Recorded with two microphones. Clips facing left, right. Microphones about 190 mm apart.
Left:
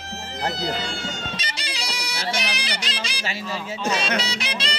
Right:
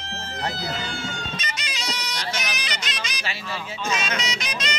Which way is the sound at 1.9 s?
10° left (ahead or behind).